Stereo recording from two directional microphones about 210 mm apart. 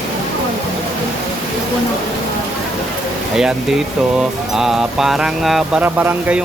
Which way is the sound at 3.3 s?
5° right (ahead or behind).